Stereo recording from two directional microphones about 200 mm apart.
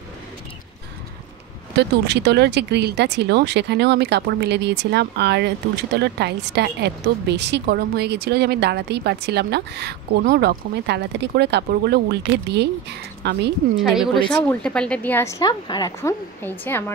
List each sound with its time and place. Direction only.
1.8 s speech: 60° right (ahead or behind)
13.2 s speech: 55° right (ahead or behind)
13.7 s a woman's voice: centre (ahead or behind)